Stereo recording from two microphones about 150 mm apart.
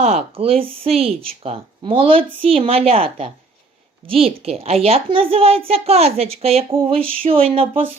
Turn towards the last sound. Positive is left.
turn(degrees=-40)  # may be behind; listen again after turning